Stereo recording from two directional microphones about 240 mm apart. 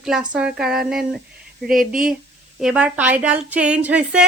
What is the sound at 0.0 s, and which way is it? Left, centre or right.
A woman's voice, centre.